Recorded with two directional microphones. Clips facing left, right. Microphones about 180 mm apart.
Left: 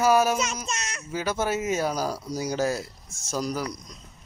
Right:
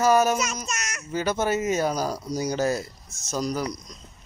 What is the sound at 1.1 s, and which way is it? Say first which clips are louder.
Speech: right 2 dB; 5° left (ahead or behind).